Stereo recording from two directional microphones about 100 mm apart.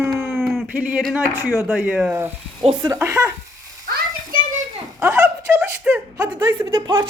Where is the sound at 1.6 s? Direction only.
20° right (ahead or behind).